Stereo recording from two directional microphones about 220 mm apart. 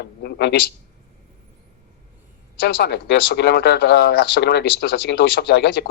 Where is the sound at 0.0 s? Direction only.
45° left (ahead or behind).